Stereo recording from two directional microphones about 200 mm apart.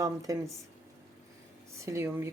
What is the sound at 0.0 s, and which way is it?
Speech, 15° right (ahead or behind).